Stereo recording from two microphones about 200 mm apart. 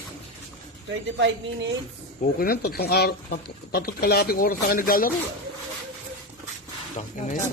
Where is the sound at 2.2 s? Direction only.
50° left (ahead or behind).